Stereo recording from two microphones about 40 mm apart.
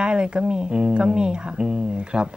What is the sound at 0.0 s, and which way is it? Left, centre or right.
A woman's voice, right.